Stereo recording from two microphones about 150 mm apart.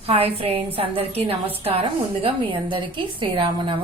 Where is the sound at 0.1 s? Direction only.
40° right (ahead or behind).